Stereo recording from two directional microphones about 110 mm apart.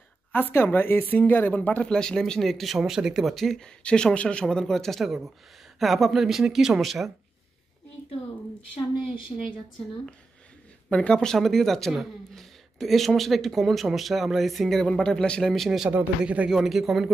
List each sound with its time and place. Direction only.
0.3 s speech: 20° left (ahead or behind); by 7.1 s centre (ahead or behind)
9.3 s speech: 40° left (ahead or behind)
10.9 s speech: 10° left (ahead or behind)
15.9 s speech: 15° right (ahead or behind)